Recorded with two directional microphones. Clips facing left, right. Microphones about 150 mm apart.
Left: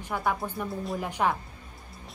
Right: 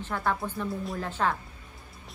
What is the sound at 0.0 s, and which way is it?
A woman's voice, 10° left (ahead or behind).